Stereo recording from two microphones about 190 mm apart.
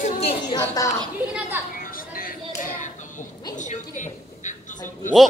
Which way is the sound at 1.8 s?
50° left (ahead or behind).